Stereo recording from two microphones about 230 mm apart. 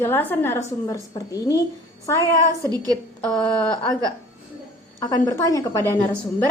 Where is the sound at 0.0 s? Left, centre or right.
Centre.